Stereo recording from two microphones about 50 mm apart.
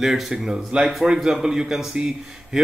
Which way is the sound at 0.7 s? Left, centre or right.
Right.